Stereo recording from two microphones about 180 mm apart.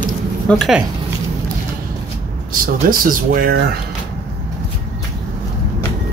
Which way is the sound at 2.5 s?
50° right (ahead or behind).